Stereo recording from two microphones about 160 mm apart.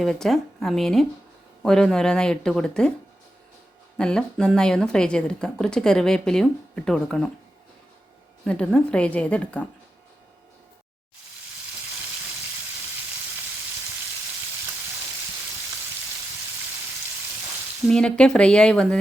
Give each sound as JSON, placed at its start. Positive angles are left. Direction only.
{"t": 0.0, "sound": "speech", "side_deg": 5}
{"t": 3.9, "sound": "speech", "side_deg": 5}
{"t": 8.4, "sound": "a woman's voice", "side_deg": 5}
{"t": 17.8, "sound": "speech", "side_deg": 5}